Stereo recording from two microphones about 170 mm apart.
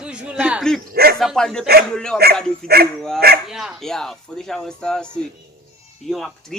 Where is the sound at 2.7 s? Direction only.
65° right (ahead or behind).